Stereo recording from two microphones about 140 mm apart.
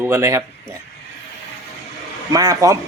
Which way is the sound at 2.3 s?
25° right (ahead or behind).